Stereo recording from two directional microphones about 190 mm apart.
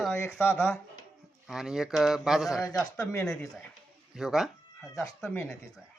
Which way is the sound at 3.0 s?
15° left (ahead or behind).